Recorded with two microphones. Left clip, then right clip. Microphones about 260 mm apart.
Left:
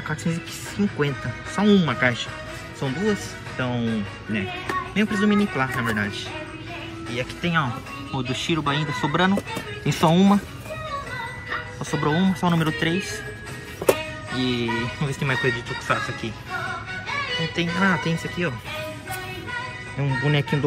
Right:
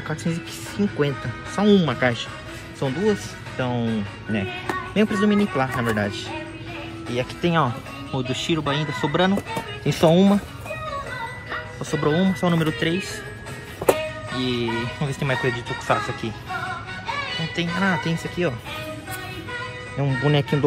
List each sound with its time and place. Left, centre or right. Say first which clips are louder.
0.1 s speech: even; centre
11.8 s speech: right 2 dB; centre
14.3 s speech: left 1 dB; centre
17.6 s speech: even; centre
20.0 s speech: right 2 dB; centre